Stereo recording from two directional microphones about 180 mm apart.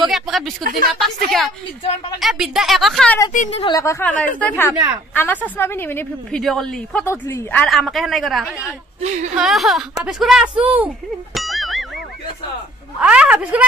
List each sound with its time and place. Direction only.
0.0 s a woman's voice: centre (ahead or behind)
3.3 s speech: 35° left (ahead or behind)
3.7 s a woman's voice: 15° left (ahead or behind)
7.6 s a woman's voice: centre (ahead or behind)
9.0 s speech: 40° right (ahead or behind)
9.4 s a woman's voice: centre (ahead or behind)
11.3 s music: centre (ahead or behind)
13.0 s speech: 5° right (ahead or behind)